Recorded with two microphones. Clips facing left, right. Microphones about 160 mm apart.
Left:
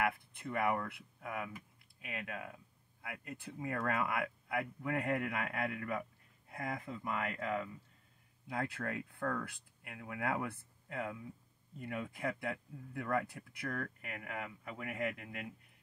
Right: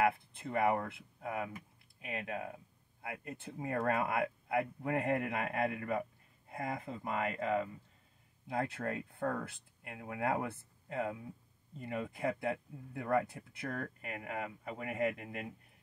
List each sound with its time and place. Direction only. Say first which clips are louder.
0.0 s speech: right 4 dB; 30° right (ahead or behind)